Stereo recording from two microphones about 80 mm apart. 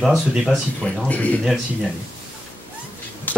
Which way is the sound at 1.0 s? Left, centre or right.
Centre.